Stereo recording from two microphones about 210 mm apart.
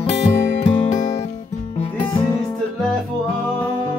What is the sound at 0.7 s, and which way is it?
Music, 35° left (ahead or behind).